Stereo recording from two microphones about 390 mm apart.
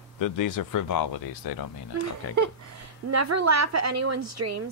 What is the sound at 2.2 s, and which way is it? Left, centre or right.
Chop, left.